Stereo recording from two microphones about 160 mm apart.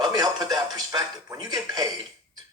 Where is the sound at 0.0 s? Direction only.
25° right (ahead or behind).